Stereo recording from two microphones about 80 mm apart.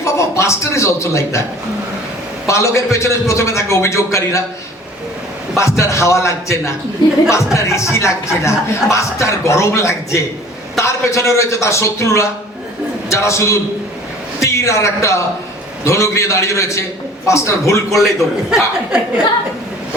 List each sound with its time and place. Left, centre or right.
0.0 s a man's voice: left
2.5 s speech: left
5.5 s speech: left
18.5 s speech: centre